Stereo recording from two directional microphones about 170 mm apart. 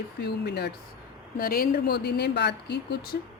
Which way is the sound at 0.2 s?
80° left.